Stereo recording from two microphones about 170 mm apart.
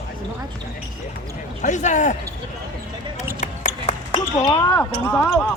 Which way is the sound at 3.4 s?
40° left (ahead or behind).